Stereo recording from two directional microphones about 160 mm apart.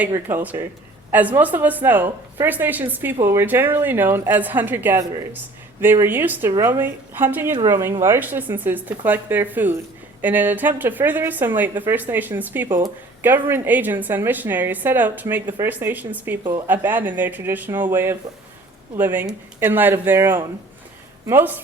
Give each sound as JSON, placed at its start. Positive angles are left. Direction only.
{"t": 0.3, "sound": "a woman's voice", "side_deg": -15}
{"t": 16.4, "sound": "speech", "side_deg": -25}
{"t": 16.6, "sound": "a woman's voice", "side_deg": -10}